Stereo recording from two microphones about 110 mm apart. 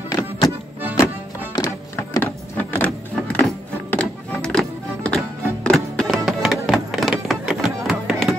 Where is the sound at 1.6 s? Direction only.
30° left (ahead or behind).